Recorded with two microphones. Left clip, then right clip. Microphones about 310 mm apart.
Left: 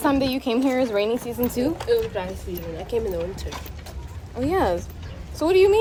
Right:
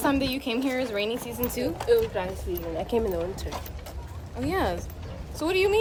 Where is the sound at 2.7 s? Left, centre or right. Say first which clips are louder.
Left 1 dB; right.